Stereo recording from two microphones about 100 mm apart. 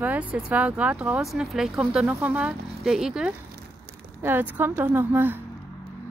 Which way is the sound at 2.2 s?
15° right (ahead or behind).